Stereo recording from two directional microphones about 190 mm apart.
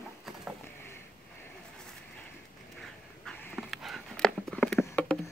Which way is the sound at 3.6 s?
Centre (ahead or behind).